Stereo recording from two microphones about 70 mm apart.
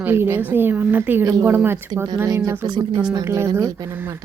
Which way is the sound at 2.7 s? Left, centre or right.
Right.